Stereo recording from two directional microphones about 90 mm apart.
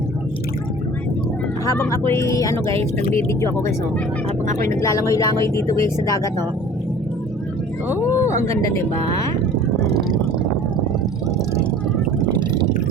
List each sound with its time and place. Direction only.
1.8 s speech: 30° left (ahead or behind)
2.6 s speech: 90° right
3.2 s speech: 30° left (ahead or behind)
8.0 s speech: 35° left (ahead or behind)